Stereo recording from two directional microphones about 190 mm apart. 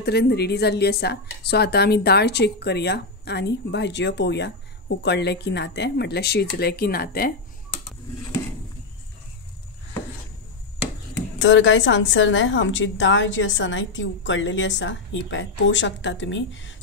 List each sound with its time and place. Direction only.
0.0 s a woman's voice: 60° left (ahead or behind)
11.1 s a woman's voice: 75° left (ahead or behind)